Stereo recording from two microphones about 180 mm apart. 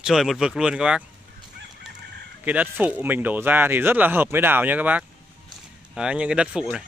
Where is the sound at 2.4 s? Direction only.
10° right (ahead or behind).